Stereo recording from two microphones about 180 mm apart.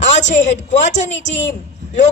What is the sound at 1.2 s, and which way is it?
Speech, 80° left.